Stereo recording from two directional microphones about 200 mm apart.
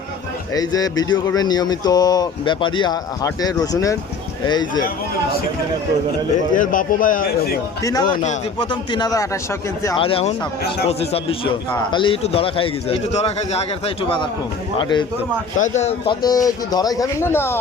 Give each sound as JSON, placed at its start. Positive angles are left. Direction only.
{"t": 0.5, "sound": "speech", "side_deg": 20}
{"t": 6.5, "sound": "a man's voice", "side_deg": 40}
{"t": 7.8, "sound": "speech", "side_deg": 15}
{"t": 10.0, "sound": "a man's voice", "side_deg": 30}
{"t": 15.5, "sound": "a man's voice", "side_deg": 35}
{"t": 16.2, "sound": "speech", "side_deg": 20}